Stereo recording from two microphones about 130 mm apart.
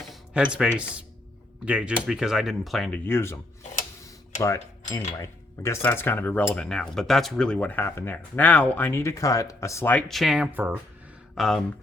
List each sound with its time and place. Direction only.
0.1 s speech: 10° right (ahead or behind)
2.9 s speech: 15° left (ahead or behind)
4.4 s cutlery: 25° left (ahead or behind)
5.6 s speech: 20° left (ahead or behind)
10.1 s speech: centre (ahead or behind)
11.3 s speech: centre (ahead or behind)